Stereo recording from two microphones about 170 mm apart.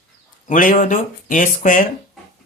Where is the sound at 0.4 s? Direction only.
50° left (ahead or behind).